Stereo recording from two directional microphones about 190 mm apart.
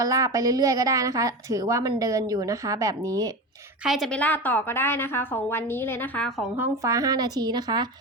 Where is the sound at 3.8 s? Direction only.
Centre (ahead or behind); by 7.9 s 20° right (ahead or behind).